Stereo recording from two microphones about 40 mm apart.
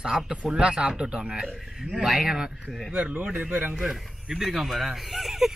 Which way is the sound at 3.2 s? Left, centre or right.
Right.